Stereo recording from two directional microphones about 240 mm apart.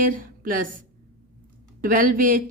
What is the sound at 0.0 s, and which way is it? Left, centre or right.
Speech, right.